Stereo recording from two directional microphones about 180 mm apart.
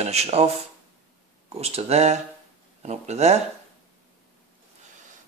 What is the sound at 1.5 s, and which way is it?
Speech, 35° right (ahead or behind).